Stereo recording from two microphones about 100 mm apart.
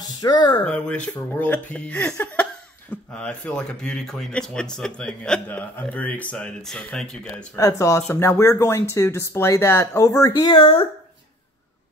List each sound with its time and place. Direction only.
0.2 s speech: 45° left (ahead or behind)
0.7 s speech: 10° left (ahead or behind)
7.5 s speech: 30° left (ahead or behind)
10.5 s speech: 60° left (ahead or behind)